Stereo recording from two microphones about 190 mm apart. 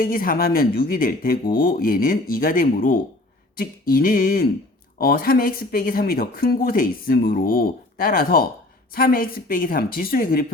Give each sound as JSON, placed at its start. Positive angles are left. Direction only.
{"t": 0.0, "sound": "speech", "side_deg": 50}